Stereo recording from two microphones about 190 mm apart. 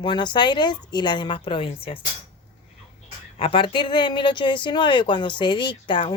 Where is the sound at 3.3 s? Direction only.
30° left (ahead or behind).